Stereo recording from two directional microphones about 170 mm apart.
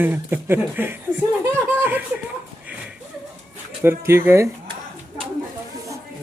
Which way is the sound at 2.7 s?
10° right (ahead or behind).